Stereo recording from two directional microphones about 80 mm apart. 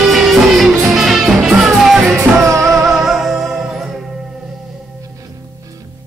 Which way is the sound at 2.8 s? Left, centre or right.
Centre.